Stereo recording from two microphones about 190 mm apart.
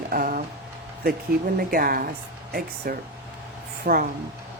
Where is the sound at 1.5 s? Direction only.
50° right (ahead or behind).